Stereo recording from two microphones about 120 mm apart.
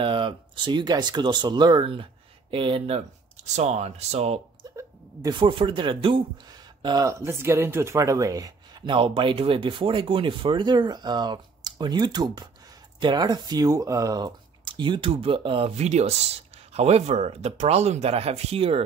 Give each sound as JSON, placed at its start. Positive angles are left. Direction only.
{"t": 0.0, "sound": "speech", "side_deg": -45}
{"t": 3.5, "sound": "speech", "side_deg": -65}
{"t": 5.3, "sound": "speech", "side_deg": -45}
{"t": 6.5, "sound": "speech", "side_deg": -35}
{"t": 8.9, "sound": "speech", "side_deg": -45}
{"t": 15.8, "sound": "speech", "side_deg": -65}